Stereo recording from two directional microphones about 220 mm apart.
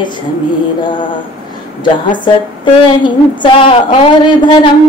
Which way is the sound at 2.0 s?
20° left (ahead or behind).